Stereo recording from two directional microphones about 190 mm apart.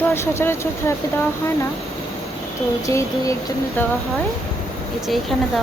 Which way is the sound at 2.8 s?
15° left (ahead or behind).